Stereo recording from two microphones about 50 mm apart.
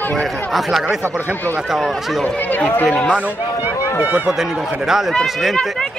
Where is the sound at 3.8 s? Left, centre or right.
Right.